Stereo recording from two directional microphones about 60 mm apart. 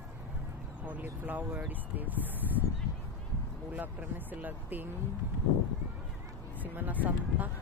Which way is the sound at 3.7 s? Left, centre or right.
Right.